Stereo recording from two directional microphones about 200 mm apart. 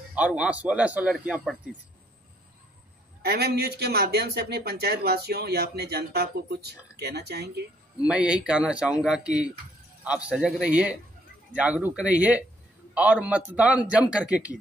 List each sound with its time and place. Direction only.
0.1 s a man's voice: 5° right (ahead or behind)
3.2 s speech: 50° right (ahead or behind)
8.1 s a man's voice: 5° right (ahead or behind)